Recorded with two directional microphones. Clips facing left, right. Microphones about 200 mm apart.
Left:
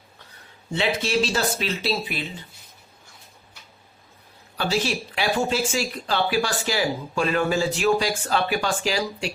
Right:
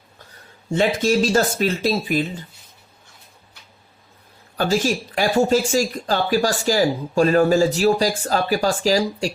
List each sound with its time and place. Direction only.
0.7 s speech: 45° right (ahead or behind)
4.5 s speech: 45° right (ahead or behind)